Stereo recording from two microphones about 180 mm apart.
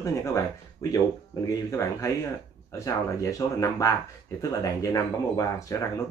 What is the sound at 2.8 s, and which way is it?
Speech, 15° left (ahead or behind).